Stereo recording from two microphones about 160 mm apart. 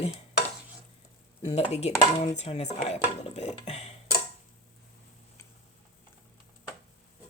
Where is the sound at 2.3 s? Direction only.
45° left (ahead or behind).